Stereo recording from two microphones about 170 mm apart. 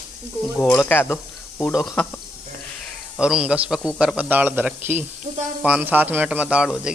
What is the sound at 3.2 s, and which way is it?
A man's voice, 5° right (ahead or behind).